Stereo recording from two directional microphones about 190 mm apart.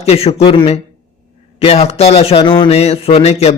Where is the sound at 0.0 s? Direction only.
35° left (ahead or behind).